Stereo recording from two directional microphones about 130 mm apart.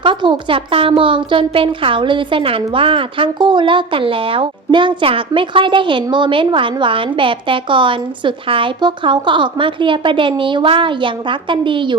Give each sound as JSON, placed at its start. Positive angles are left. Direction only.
{"t": 0.0, "sound": "a woman's voice", "side_deg": -40}